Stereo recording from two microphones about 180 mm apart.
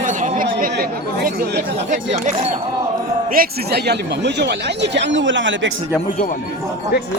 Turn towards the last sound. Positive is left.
turn(degrees=-90)